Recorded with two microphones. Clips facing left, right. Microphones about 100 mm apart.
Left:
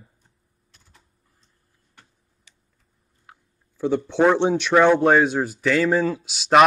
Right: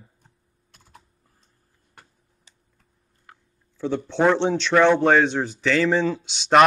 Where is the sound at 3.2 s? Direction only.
10° left (ahead or behind).